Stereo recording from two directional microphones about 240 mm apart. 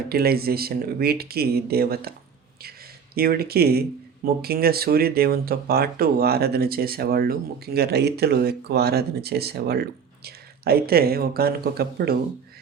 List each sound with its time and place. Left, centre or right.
0.1 s speech: right
3.2 s speech: right